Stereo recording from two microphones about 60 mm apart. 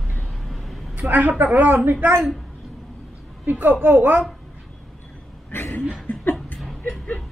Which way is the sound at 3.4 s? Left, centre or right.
Right.